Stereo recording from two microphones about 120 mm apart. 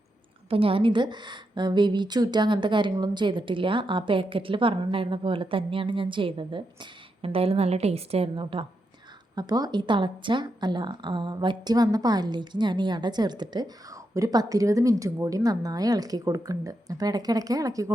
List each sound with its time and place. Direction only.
0.5 s a woman's voice: 50° right (ahead or behind)
7.2 s a woman's voice: 55° right (ahead or behind)
9.3 s speech: 35° right (ahead or behind)